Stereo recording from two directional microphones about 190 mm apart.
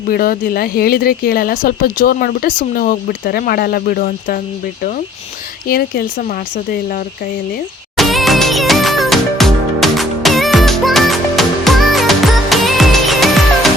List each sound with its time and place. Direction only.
0.1 s speech: 50° left (ahead or behind)
5.6 s speech: 50° left (ahead or behind)
7.9 s music: centre (ahead or behind)